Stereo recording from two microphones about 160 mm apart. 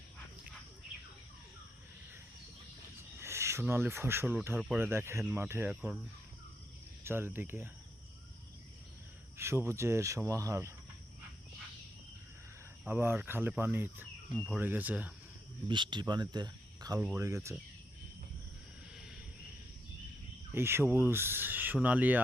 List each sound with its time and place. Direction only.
3.2 s speech: 15° right (ahead or behind)
7.0 s speech: 15° right (ahead or behind)
9.4 s speech: 15° right (ahead or behind)
12.8 s speech: 15° right (ahead or behind)
14.3 s speech: 5° left (ahead or behind)
14.6 s speech: 10° right (ahead or behind)
15.6 s speech: 30° right (ahead or behind)
20.5 s speech: 15° right (ahead or behind)